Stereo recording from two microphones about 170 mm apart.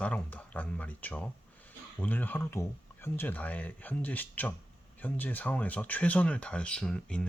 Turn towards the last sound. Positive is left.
turn(degrees=5)  # may be behind; listen again after turning